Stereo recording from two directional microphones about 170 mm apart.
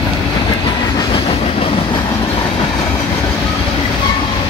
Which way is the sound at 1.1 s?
35° left (ahead or behind).